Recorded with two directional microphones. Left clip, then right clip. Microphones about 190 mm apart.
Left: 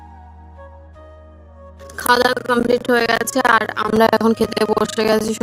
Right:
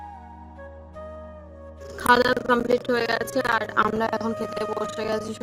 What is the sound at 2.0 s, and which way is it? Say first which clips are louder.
A woman's voice: left 4 dB; 45° left (ahead or behind).